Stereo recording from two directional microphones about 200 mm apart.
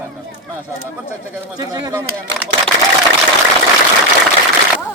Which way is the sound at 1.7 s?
20° right (ahead or behind).